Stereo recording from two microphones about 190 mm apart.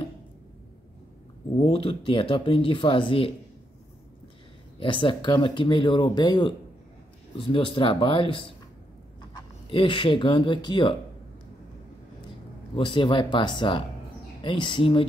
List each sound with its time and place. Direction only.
1.6 s speech: 30° left (ahead or behind)
4.7 s speech: 25° left (ahead or behind)
12.7 s speech: 25° left (ahead or behind)